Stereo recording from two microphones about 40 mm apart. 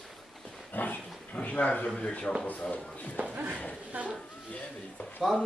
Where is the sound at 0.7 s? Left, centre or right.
Left.